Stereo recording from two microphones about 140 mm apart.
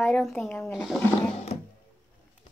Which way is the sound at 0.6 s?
Centre (ahead or behind).